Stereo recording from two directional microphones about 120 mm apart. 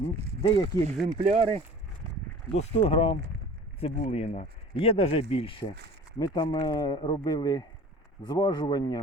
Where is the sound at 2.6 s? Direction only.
55° left (ahead or behind).